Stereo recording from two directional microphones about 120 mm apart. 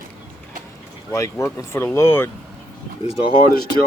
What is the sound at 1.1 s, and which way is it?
Speech, 25° left (ahead or behind).